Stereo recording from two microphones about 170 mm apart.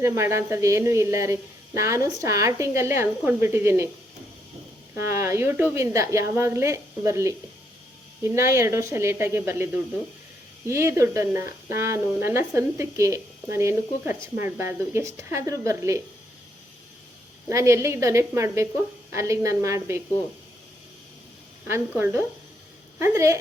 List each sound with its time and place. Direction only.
0.0 s speech: 15° right (ahead or behind)
4.9 s speech: 15° right (ahead or behind)
10.7 s speech: 15° right (ahead or behind)
17.5 s speech: 15° right (ahead or behind)
21.7 s speech: 15° right (ahead or behind)